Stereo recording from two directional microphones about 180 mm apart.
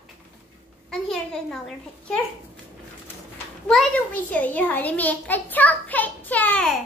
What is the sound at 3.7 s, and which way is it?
A child's voice, 10° left (ahead or behind).